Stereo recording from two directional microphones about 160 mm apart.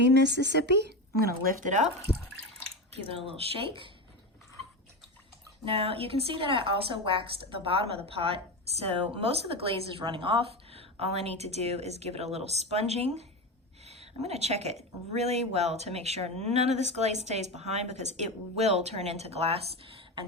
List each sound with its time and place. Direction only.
0.0 s speech: 90° right; by 1.9 s 50° right (ahead or behind)
3.2 s a woman's voice: 35° right (ahead or behind)
5.6 s a woman's voice: 35° right (ahead or behind)